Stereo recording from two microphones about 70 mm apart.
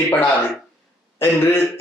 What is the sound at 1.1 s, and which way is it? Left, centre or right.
Speech, left.